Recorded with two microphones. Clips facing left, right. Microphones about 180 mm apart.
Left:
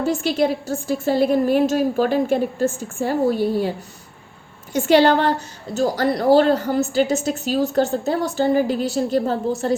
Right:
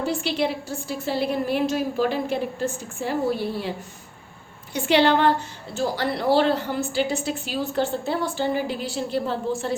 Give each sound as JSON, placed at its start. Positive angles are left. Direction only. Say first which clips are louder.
{"t": 0.0, "sound": "a woman's voice", "louder": "left 5 dB", "side_deg": 45}